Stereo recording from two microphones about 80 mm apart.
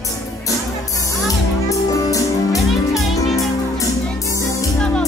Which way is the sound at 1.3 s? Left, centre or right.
Left.